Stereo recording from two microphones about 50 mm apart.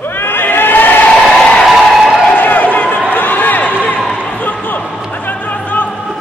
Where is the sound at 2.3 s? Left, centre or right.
Left.